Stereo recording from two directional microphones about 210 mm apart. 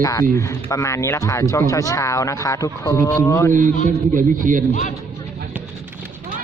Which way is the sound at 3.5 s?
40° right (ahead or behind).